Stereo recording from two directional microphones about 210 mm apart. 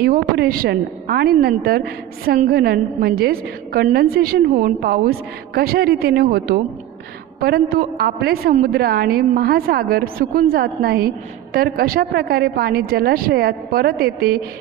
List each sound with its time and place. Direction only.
0.0 s a woman's voice: 45° right (ahead or behind)